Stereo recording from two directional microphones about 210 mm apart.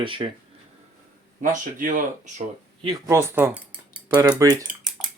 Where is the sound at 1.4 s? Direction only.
40° right (ahead or behind).